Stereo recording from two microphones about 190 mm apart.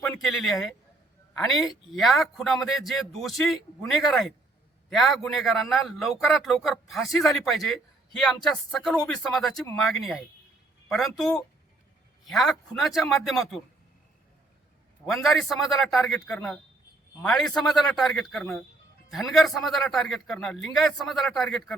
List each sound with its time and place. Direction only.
0.0 s a sound: centre (ahead or behind)
1.3 s a man's voice: centre (ahead or behind)
15.1 s a man's voice: centre (ahead or behind)